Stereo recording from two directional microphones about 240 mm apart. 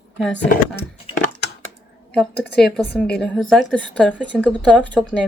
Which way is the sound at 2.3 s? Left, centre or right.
Left.